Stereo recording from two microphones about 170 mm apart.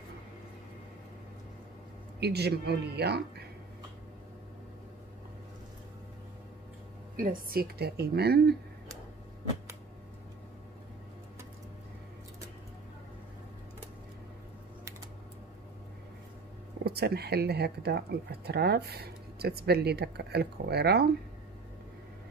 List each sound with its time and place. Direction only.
2.1 s speech: 75° right (ahead or behind)
7.2 s a woman's voice: 55° right (ahead or behind)
16.8 s speech: 70° right (ahead or behind)